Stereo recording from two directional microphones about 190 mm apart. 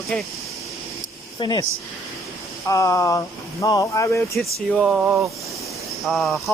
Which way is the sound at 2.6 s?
15° left (ahead or behind).